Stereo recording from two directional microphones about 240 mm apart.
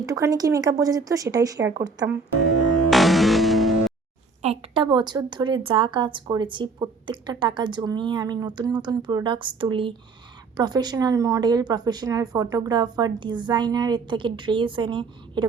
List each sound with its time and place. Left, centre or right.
0.0 s a woman's voice: centre
2.9 s music: centre
4.4 s a woman's voice: right